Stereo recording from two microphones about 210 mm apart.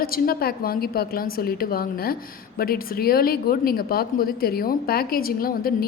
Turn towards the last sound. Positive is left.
turn(degrees=45)  # may be behind; listen again after turning